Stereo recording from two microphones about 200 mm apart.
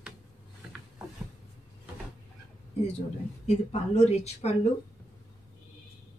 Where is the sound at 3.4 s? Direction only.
35° left (ahead or behind).